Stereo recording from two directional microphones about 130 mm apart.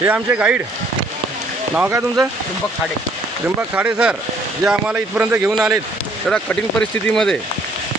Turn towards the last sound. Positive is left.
turn(degrees=5)  # may be behind; listen again after turning